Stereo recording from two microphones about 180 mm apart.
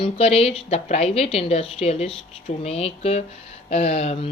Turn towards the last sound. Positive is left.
turn(degrees=35)  # may be behind; listen again after turning